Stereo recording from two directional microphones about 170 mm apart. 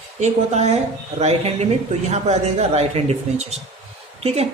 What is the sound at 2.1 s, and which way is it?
A woman's voice, 40° right (ahead or behind).